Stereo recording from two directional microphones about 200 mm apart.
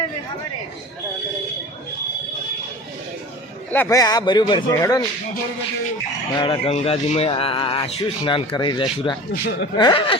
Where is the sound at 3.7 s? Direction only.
15° left (ahead or behind).